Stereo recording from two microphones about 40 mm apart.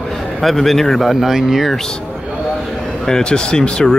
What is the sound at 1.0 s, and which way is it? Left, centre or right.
Speech, centre.